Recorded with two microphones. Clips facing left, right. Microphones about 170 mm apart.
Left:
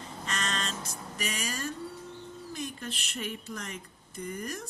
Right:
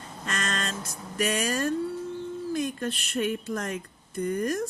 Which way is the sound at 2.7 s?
55° right (ahead or behind).